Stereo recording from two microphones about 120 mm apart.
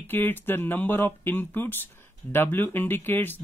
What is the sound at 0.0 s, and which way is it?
Speech, 15° left (ahead or behind).